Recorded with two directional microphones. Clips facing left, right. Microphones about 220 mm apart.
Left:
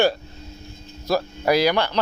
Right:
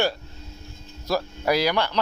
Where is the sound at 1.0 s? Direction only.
50° left (ahead or behind).